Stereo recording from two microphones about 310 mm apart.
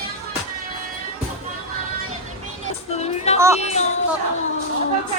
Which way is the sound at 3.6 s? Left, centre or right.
Left.